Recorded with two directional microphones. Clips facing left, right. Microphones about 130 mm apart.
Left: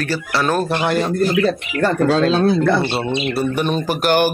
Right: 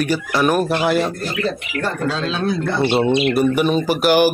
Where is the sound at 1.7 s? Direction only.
45° left (ahead or behind).